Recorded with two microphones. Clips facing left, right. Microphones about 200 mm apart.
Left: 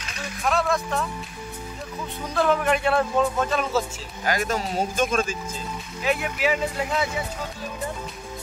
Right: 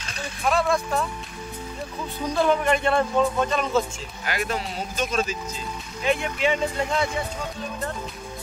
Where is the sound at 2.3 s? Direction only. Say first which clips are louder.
Even; 5° left (ahead or behind).